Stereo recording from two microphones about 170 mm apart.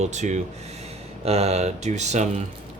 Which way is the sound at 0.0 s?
45° right (ahead or behind).